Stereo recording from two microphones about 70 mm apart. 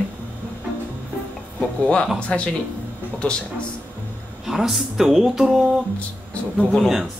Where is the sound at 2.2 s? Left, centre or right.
Centre.